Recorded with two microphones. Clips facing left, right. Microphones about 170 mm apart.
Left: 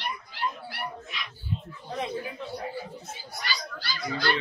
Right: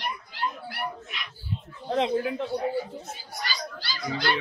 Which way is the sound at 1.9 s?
85° right.